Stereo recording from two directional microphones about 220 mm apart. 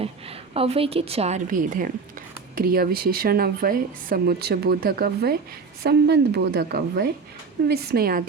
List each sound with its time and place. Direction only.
0.0 s a woman's voice: 25° right (ahead or behind); by 8.2 s 45° right (ahead or behind)